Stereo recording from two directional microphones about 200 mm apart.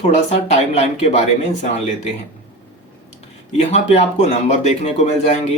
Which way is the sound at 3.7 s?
35° left (ahead or behind).